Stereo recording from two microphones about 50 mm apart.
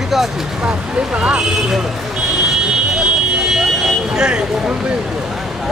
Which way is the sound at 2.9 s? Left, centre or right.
Centre.